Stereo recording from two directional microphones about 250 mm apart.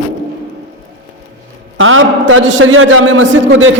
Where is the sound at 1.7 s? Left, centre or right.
Right.